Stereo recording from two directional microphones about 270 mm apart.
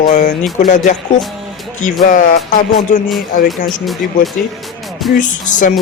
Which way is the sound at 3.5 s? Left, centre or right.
Centre.